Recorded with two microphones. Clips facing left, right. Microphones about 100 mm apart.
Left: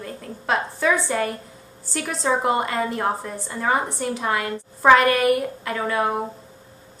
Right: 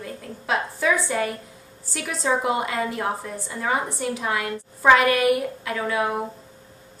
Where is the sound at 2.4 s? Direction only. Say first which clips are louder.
Left 2 dB; 45° left (ahead or behind).